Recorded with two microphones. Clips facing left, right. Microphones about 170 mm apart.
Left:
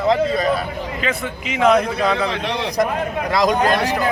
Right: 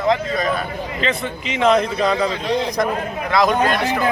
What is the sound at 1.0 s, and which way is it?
A man's voice, 5° left (ahead or behind).